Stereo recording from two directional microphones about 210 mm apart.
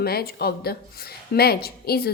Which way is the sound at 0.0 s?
50° left (ahead or behind).